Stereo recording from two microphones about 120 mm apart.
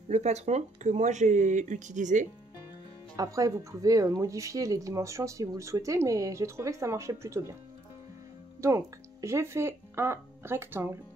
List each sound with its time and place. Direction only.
0.1 s speech: 65° right (ahead or behind); by 2.2 s 90° right
3.2 s speech: 30° right (ahead or behind)
8.5 s speech: 25° right (ahead or behind)